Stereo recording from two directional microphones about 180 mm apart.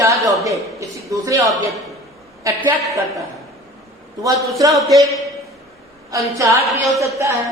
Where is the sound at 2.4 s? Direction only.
15° right (ahead or behind).